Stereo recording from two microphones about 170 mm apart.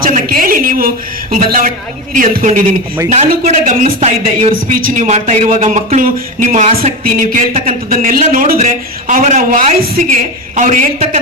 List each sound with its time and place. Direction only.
0.0 s a sound: 55° right (ahead or behind)
2.1 s speech: 50° right (ahead or behind); by 4.5 s 35° right (ahead or behind)
4.7 s speech: 55° right (ahead or behind)